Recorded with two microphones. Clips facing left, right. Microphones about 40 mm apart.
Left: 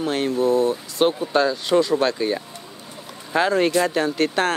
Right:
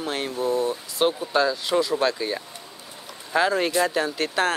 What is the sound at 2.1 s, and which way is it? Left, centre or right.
Speech, centre.